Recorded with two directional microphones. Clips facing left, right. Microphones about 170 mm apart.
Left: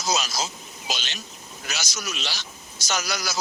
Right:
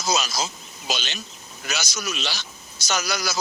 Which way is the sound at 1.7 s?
65° right (ahead or behind).